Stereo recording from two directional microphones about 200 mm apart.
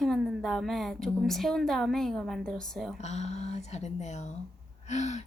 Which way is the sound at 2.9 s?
35° left (ahead or behind).